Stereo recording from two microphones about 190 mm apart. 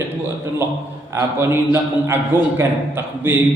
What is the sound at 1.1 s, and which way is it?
A man's voice, 15° right (ahead or behind).